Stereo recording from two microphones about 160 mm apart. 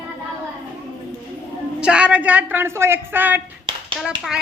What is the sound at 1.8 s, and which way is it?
A woman's voice, 5° right (ahead or behind).